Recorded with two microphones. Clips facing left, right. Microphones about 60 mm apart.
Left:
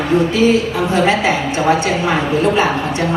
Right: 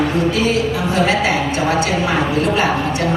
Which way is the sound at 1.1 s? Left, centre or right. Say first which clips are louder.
Left 1 dB; left.